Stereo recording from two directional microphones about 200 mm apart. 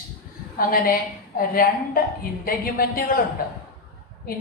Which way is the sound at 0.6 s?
45° left (ahead or behind).